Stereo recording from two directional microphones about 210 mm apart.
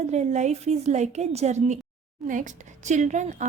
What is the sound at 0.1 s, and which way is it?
A woman's voice, 35° right (ahead or behind).